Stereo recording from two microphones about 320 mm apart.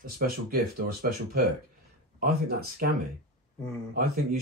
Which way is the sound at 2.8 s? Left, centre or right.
Right.